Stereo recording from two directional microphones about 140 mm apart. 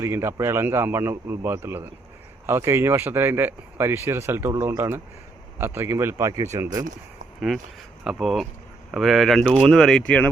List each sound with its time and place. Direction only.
0.0 s speech: 20° right (ahead or behind)
7.3 s speech: centre (ahead or behind)